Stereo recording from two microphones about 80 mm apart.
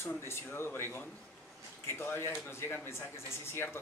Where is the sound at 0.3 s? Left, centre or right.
Left.